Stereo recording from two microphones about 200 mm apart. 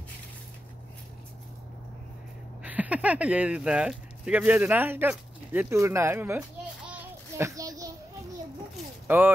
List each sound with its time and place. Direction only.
2.6 s speech: 5° right (ahead or behind)
6.9 s child singing: 15° right (ahead or behind)
9.0 s speech: 10° right (ahead or behind)